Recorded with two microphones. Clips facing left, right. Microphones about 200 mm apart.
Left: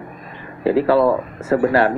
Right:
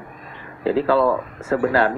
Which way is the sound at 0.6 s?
60° left (ahead or behind).